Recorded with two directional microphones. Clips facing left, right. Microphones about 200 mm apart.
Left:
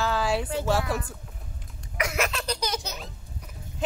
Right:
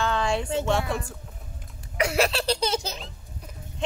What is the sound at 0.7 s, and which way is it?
Speech, 5° left (ahead or behind).